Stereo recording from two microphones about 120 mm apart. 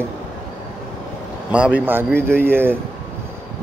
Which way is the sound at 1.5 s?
10° right (ahead or behind).